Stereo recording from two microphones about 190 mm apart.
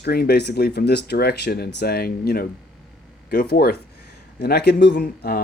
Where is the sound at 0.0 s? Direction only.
55° left (ahead or behind).